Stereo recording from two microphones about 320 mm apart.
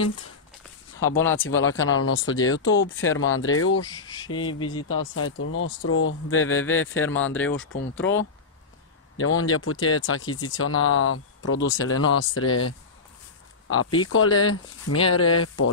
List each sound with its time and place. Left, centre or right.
1.0 s speech: centre
1.3 s speech: left
3.9 s speech: centre
4.6 s speech: left